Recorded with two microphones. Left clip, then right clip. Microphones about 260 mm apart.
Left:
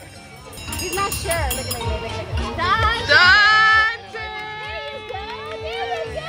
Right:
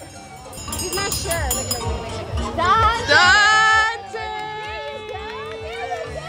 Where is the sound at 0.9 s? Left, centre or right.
Left.